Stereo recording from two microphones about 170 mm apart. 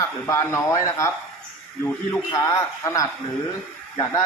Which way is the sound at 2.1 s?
20° left (ahead or behind).